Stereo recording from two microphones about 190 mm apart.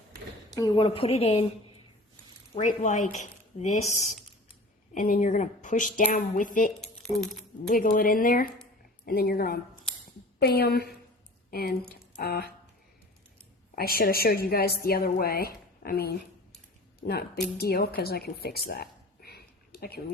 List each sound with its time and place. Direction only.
0.5 s a woman's voice: 20° left (ahead or behind)
2.6 s a woman's voice: 40° left (ahead or behind)
7.0 s speech: centre (ahead or behind)
7.7 s a woman's voice: 50° left (ahead or behind)
13.7 s a woman's voice: 55° left (ahead or behind)